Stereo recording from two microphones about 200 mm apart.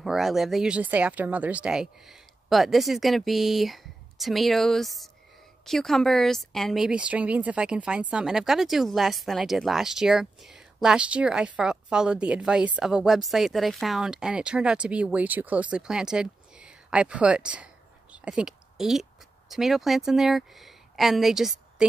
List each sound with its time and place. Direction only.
0.0 s speech: centre (ahead or behind)
18.1 s a sound: 5° right (ahead or behind)
19.5 s speech: centre (ahead or behind)